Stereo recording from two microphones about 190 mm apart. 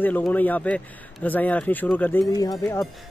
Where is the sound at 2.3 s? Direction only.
20° left (ahead or behind).